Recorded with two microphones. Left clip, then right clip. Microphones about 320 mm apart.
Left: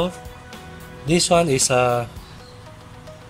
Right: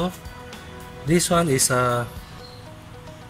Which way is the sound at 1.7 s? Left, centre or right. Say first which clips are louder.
Left 4 dB; left.